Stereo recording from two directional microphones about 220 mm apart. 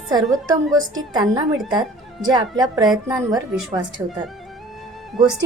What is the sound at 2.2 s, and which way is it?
A woman's voice, 20° right (ahead or behind).